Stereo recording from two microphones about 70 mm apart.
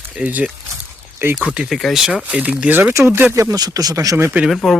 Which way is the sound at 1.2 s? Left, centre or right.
Right.